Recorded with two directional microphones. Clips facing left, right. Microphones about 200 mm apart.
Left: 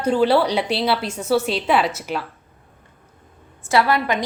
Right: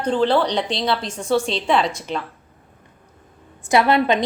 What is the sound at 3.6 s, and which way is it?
Speech, 20° right (ahead or behind).